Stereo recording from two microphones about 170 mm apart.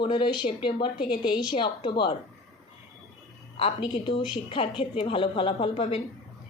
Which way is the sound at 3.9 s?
30° left (ahead or behind).